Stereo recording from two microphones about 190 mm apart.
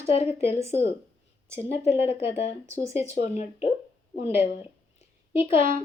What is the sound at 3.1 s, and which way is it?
Speech, 35° left (ahead or behind).